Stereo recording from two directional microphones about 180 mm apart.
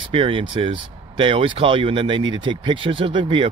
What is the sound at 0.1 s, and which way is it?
Speech, 30° right (ahead or behind).